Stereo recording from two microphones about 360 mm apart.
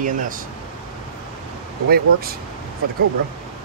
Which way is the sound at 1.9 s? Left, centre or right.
Right.